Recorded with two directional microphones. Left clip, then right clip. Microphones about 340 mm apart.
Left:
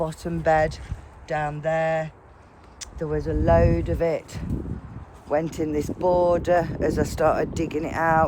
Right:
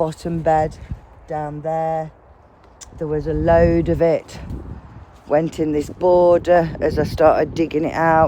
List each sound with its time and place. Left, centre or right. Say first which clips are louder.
0.0 s speech: right 6 dB; right
0.4 s speech: right 3 dB; centre
3.0 s speech: right 5 dB; right